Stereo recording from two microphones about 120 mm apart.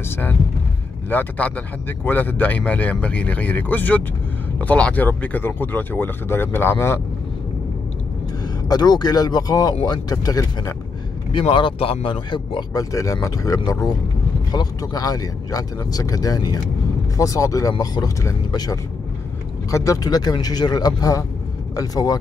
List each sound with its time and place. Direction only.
0.1 s speech: 15° left (ahead or behind)
8.6 s speech: 35° left (ahead or behind)
11.3 s speech: 45° left (ahead or behind)
12.9 s speech: 30° left (ahead or behind)